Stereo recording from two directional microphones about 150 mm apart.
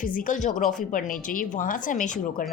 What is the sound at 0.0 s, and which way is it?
A woman's voice, 65° left (ahead or behind).